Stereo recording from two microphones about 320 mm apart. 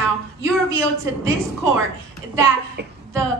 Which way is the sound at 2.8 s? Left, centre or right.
Right.